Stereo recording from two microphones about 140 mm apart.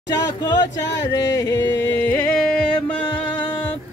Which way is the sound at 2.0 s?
15° left (ahead or behind).